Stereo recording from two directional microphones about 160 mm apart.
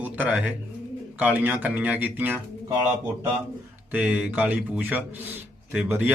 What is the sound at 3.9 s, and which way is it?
Speech, 10° right (ahead or behind).